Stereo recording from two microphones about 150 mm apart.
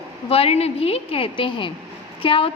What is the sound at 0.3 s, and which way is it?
A woman's voice, 40° left (ahead or behind).